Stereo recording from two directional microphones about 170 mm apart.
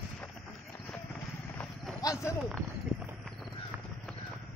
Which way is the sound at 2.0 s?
15° left (ahead or behind).